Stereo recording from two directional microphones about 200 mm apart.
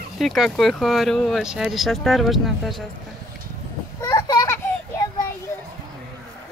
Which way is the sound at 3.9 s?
15° left (ahead or behind).